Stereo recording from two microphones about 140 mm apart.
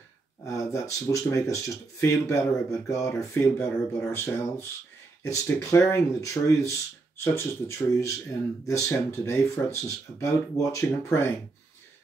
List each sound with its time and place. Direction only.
0.5 s speech: 20° left (ahead or behind)